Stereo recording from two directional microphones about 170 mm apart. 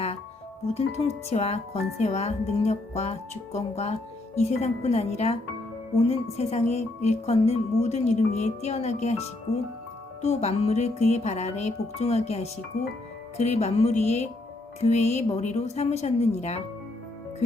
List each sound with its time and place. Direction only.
0.7 s speech: 40° left (ahead or behind)